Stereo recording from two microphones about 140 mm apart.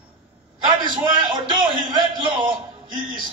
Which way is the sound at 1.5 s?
35° right (ahead or behind).